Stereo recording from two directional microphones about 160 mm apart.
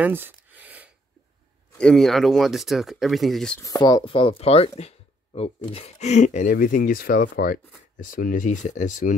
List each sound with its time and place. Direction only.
0.0 s a sound: 10° right (ahead or behind)
1.8 s speech: 5° left (ahead or behind)
3.5 s speech: 20° left (ahead or behind); by 9.1 s 50° left (ahead or behind)